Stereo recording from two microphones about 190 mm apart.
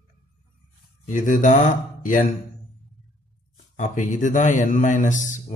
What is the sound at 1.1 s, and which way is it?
A man's voice, 40° left (ahead or behind).